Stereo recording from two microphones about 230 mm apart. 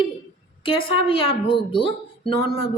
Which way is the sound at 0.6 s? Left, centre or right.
Left.